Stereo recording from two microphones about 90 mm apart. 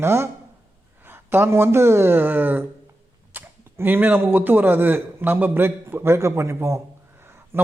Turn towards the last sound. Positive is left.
turn(degrees=-25)  # may be behind; listen again after turning